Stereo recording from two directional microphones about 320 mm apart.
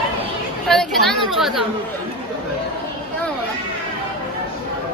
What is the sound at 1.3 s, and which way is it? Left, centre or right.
Chatter, centre.